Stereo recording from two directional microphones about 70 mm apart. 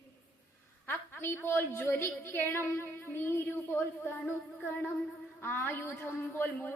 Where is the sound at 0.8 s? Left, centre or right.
Left.